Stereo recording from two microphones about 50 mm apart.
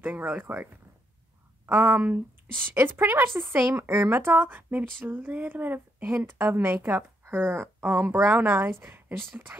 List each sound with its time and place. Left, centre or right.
0.0 s speech: right
1.7 s speech: right
2.7 s speech: right
9.5 s speech: right